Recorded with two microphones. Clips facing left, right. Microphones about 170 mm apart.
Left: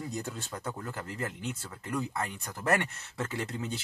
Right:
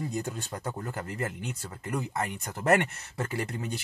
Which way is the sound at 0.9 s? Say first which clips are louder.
Right 3 dB; 60° right (ahead or behind).